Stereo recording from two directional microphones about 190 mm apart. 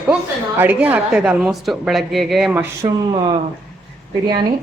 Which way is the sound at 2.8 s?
25° right (ahead or behind).